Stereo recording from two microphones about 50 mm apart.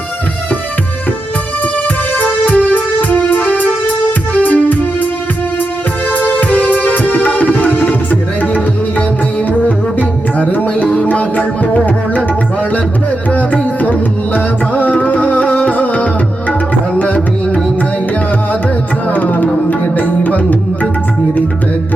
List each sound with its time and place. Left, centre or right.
2.1 s music: left
6.1 s music: left
10.5 s music: left
10.8 s music: left
19.1 s tabla: left
19.8 s music: left